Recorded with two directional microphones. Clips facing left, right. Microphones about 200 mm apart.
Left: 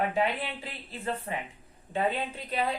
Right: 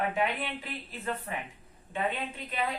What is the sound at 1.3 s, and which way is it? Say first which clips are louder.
Speech: left 2 dB; 25° left (ahead or behind).